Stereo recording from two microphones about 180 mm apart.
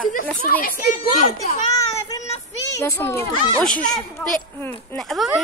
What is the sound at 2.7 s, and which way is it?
A child's voice, 15° left (ahead or behind).